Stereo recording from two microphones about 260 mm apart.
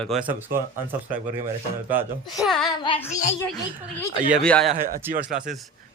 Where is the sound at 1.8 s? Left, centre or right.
Centre.